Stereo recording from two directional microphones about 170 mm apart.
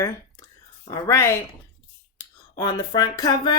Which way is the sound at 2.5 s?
25° left (ahead or behind).